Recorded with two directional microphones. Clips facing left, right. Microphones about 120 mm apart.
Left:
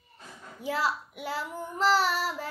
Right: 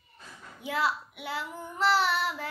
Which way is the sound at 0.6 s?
40° left (ahead or behind).